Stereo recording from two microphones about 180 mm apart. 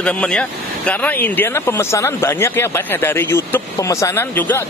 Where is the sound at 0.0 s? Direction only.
5° left (ahead or behind).